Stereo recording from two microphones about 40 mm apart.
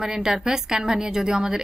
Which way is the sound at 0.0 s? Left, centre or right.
Centre.